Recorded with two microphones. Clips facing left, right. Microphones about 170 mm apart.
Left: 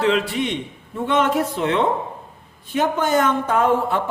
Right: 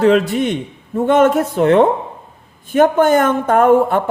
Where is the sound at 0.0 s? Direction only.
45° right (ahead or behind).